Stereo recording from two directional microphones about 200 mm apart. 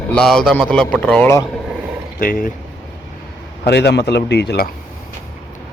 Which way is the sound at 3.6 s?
55° left (ahead or behind).